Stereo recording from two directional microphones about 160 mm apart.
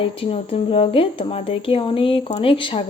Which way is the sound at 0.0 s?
35° left (ahead or behind).